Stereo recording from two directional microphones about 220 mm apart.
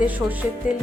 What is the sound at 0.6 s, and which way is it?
Music, 35° left (ahead or behind).